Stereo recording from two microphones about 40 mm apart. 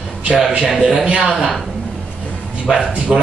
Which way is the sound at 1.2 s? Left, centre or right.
Centre.